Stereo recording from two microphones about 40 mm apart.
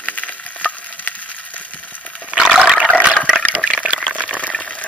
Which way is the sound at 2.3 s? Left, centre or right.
Right.